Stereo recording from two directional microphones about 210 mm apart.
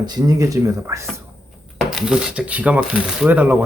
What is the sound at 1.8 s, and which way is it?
Speech, centre (ahead or behind).